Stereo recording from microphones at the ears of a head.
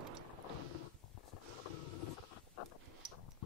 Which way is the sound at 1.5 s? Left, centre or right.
Left.